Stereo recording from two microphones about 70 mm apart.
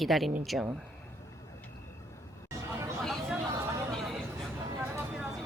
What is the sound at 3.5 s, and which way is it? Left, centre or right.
Chatter, right.